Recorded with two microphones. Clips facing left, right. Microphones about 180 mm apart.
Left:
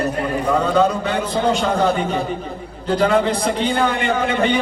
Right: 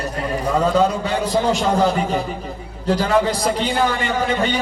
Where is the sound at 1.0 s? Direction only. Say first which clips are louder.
Even; 35° right (ahead or behind).